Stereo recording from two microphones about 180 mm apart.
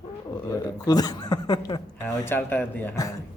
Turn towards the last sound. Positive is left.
turn(degrees=15)  # may be behind; listen again after turning